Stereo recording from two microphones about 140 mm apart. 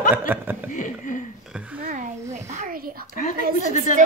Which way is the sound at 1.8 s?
60° right (ahead or behind).